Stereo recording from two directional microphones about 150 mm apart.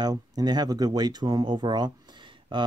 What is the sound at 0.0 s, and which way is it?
Speech, 25° right (ahead or behind).